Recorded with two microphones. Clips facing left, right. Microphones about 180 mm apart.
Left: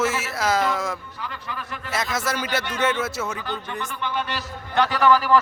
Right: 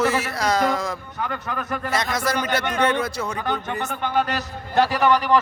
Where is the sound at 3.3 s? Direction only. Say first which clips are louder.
Right 4 dB; 60° right (ahead or behind).